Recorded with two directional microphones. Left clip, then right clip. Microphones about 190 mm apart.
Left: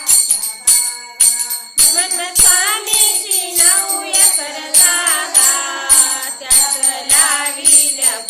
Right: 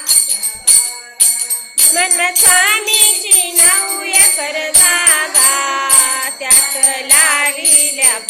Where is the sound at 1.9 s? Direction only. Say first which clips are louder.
Right 5 dB; 20° right (ahead or behind).